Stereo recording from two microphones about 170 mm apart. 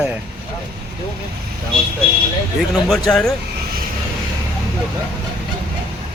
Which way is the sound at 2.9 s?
5° left (ahead or behind).